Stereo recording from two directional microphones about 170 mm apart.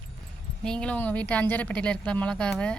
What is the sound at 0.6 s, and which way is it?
Speech, 5° left (ahead or behind).